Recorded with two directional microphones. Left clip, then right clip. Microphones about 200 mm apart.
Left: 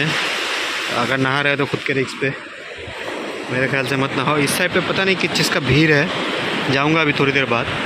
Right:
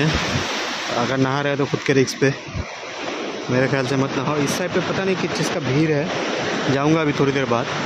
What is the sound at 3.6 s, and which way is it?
Speech, 15° right (ahead or behind).